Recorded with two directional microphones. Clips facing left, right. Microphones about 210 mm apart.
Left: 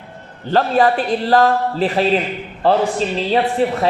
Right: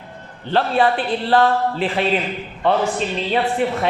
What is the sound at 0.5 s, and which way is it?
A man's voice, 40° left (ahead or behind).